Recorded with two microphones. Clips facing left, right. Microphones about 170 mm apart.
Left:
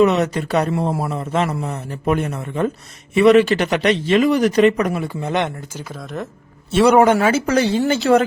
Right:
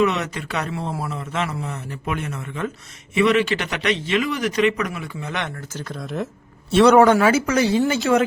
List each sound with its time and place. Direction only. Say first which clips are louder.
0.0 s a man's voice: left 6 dB; 40° left (ahead or behind)
5.5 s a man's voice: even; 10° left (ahead or behind)
6.9 s a man's voice: even; 20° left (ahead or behind)